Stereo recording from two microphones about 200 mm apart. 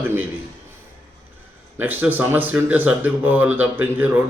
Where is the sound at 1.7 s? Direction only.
10° right (ahead or behind).